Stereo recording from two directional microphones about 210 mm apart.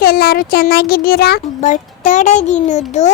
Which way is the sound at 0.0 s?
45° left (ahead or behind).